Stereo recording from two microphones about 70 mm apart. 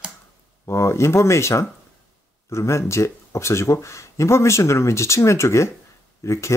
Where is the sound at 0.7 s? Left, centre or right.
Left.